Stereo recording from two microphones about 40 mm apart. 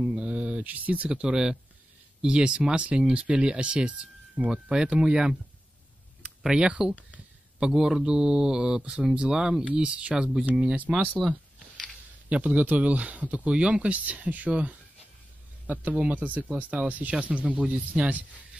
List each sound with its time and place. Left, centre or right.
0.1 s a sound: right
0.7 s speech: right
1.0 s speech: right
4.5 s speech: centre
6.4 s speech: centre
10.4 s speech: right
11.2 s a sound: centre
12.3 s speech: right